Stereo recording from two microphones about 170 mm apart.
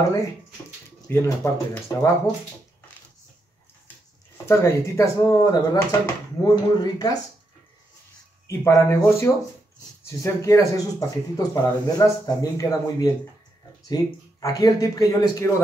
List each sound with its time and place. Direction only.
1.0 s speech: 15° left (ahead or behind)
4.5 s speech: 15° left (ahead or behind)
8.5 s speech: 15° left (ahead or behind)